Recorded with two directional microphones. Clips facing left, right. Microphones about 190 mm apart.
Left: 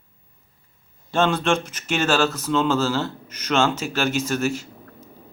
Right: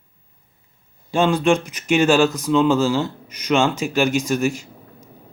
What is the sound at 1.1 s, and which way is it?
Speech, 10° right (ahead or behind).